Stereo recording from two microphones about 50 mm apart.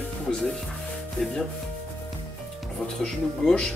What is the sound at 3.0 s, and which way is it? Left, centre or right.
Speech, centre.